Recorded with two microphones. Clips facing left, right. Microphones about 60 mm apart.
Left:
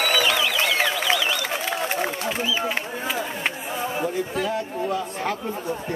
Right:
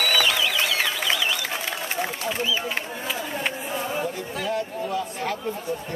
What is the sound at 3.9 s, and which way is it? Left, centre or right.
Speech, centre.